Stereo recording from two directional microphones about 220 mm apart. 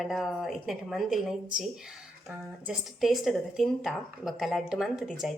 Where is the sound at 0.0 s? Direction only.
Centre (ahead or behind).